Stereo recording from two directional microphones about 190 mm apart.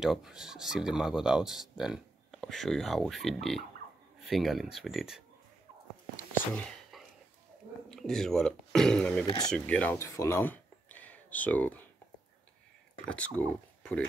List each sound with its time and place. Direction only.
0.0 s speech: 5° right (ahead or behind)
6.3 s whispering: 5° left (ahead or behind)
7.9 s speech: centre (ahead or behind)
13.1 s speech: 5° left (ahead or behind)